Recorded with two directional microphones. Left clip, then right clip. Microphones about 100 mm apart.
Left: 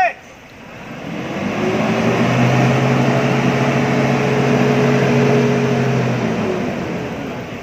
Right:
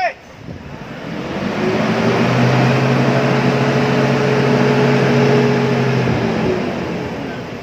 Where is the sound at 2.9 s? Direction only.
15° left (ahead or behind).